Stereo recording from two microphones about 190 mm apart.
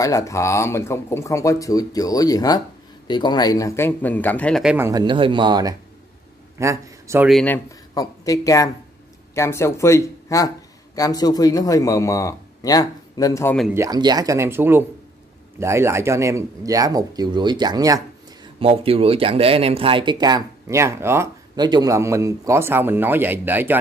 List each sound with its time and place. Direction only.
0.0 s speech: 15° left (ahead or behind)
4.7 s speech: 15° right (ahead or behind)
5.0 s speech: 25° right (ahead or behind)
7.2 s speech: centre (ahead or behind)
7.5 s a man's voice: 20° left (ahead or behind)
13.7 s speech: 20° right (ahead or behind)